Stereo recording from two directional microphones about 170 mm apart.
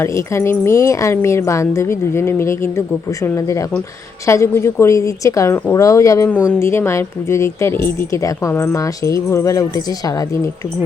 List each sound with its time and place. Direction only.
0.0 s speech: 15° left (ahead or behind)